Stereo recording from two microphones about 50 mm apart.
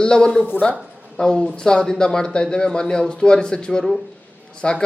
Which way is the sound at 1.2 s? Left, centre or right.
Centre.